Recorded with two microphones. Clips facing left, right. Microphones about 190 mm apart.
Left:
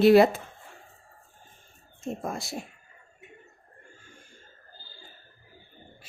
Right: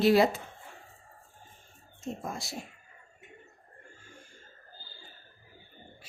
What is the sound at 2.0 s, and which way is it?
Speech, 55° left (ahead or behind).